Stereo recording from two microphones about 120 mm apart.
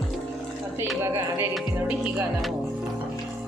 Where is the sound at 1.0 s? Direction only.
20° right (ahead or behind).